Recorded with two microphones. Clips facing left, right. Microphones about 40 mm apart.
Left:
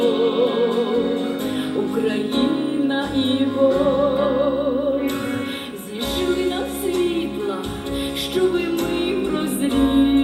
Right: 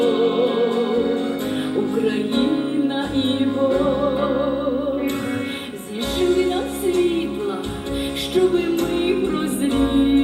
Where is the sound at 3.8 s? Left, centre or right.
Centre.